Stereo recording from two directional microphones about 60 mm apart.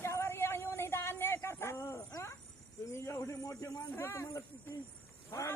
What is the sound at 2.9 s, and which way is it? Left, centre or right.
Cricket, left.